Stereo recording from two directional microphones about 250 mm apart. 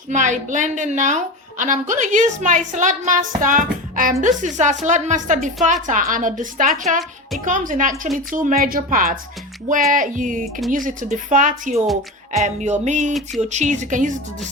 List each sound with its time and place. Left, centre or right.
0.1 s a woman's voice: right